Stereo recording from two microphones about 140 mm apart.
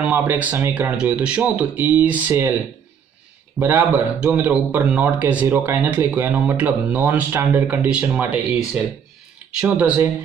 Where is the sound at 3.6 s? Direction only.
15° right (ahead or behind).